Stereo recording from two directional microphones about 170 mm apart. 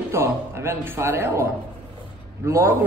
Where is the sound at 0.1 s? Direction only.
15° right (ahead or behind).